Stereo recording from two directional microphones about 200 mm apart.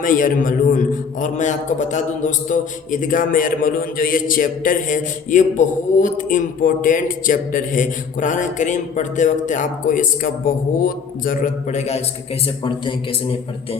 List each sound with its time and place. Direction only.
0.0 s a man's voice: 40° left (ahead or behind)